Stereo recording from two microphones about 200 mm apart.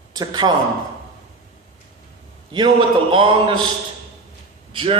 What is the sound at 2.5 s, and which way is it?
A man's voice, 25° right (ahead or behind).